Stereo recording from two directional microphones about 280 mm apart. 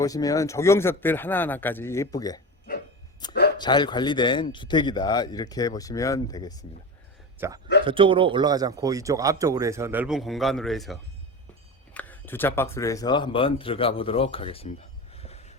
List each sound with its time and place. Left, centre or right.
0.0 s speech: centre
7.3 s a man's voice: centre; by 15.5 s left